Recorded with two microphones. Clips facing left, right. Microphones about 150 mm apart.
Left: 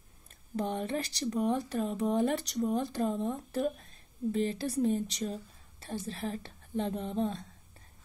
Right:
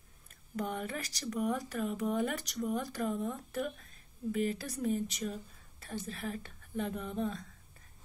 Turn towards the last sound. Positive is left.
turn(degrees=30)  # may be behind; listen again after turning